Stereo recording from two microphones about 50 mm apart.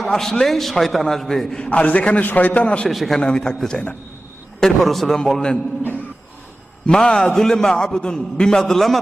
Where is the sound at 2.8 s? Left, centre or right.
Centre.